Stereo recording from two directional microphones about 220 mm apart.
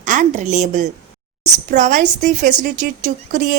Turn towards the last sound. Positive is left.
turn(degrees=-35)  # may be behind; listen again after turning